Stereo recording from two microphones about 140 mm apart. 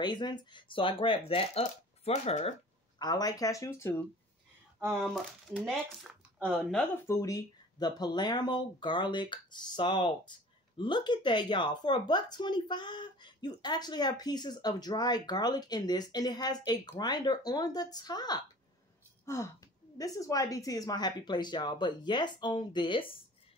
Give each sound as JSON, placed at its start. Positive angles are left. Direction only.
{"t": 0.0, "sound": "speech", "side_deg": 30}
{"t": 1.6, "sound": "speech", "side_deg": 50}
{"t": 3.0, "sound": "a woman's voice", "side_deg": 30}
{"t": 4.7, "sound": "speech", "side_deg": -15}
{"t": 5.0, "sound": "speech", "side_deg": 0}
{"t": 7.1, "sound": "a woman's voice", "side_deg": 25}